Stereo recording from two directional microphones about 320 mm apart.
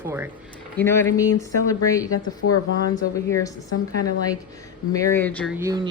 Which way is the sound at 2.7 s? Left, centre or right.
Right.